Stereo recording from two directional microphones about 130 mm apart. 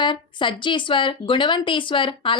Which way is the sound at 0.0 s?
40° left (ahead or behind).